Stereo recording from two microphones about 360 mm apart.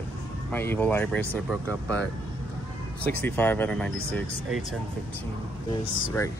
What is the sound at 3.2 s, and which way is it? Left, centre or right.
Speech, centre.